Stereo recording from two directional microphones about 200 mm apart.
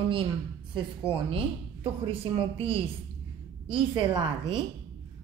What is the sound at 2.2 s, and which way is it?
A woman's voice, 25° right (ahead or behind).